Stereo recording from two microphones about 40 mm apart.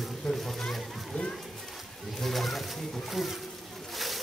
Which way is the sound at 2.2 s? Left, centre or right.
Centre.